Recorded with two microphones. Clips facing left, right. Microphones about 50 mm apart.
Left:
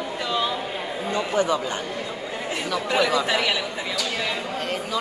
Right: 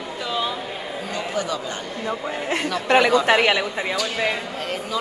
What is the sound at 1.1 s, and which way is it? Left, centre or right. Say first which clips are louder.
Speech: left 4 dB; left.